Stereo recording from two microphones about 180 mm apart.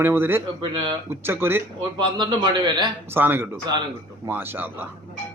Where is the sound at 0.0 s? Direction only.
10° right (ahead or behind).